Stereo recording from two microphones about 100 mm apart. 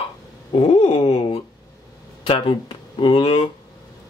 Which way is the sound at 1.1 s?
65° left (ahead or behind).